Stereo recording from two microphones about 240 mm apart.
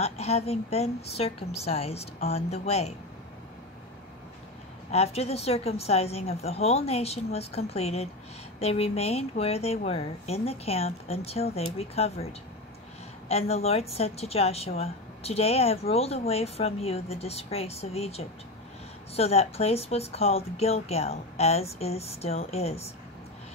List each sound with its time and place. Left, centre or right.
0.0 s a woman's voice: left
4.9 s a woman's voice: left